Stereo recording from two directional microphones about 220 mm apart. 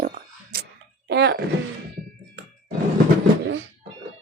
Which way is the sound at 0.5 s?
45° right (ahead or behind).